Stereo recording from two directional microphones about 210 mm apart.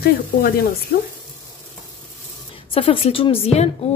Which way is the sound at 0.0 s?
45° left (ahead or behind).